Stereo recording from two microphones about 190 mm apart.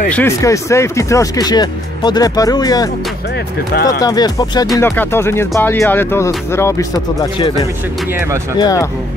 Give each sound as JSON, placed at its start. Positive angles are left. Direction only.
{"t": 0.1, "sound": "speech", "side_deg": 15}
{"t": 3.7, "sound": "speech", "side_deg": 55}
{"t": 4.0, "sound": "speech", "side_deg": 20}
{"t": 8.5, "sound": "speech", "side_deg": 20}